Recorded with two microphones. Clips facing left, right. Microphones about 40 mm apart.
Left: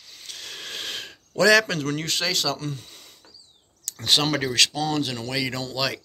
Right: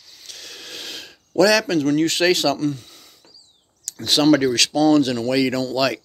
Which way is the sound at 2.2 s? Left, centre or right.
Centre.